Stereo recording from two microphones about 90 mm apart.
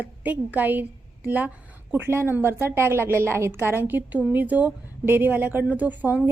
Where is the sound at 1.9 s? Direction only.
25° right (ahead or behind).